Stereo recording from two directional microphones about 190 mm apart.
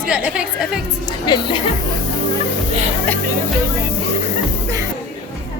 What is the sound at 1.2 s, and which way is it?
Speech, 25° left (ahead or behind).